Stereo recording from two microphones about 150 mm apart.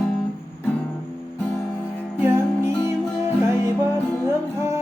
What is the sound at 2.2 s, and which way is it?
Music, 15° right (ahead or behind).